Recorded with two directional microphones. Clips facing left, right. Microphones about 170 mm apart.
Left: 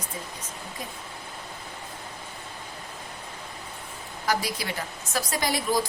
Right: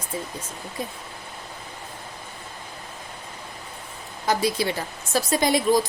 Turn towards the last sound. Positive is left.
turn(degrees=-20)  # may be behind; listen again after turning